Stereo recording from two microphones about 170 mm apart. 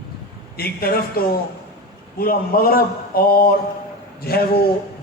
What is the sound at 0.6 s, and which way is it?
A man's voice, 65° left (ahead or behind).